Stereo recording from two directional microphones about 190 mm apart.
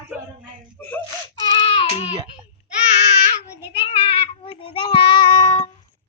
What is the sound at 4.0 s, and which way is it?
Child singing, 30° left (ahead or behind).